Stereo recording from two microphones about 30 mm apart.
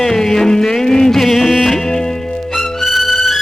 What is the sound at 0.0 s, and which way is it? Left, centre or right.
Music, centre.